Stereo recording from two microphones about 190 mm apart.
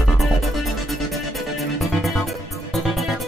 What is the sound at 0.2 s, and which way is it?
Music, centre (ahead or behind).